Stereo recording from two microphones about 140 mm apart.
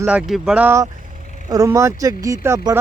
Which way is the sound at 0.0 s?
5° right (ahead or behind).